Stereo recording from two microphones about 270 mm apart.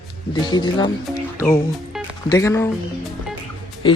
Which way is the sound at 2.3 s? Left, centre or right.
Centre.